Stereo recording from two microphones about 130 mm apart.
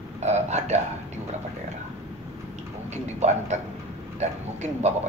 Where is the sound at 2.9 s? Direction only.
60° right (ahead or behind).